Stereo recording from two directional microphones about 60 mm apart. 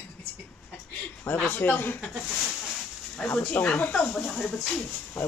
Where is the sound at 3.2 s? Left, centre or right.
Left.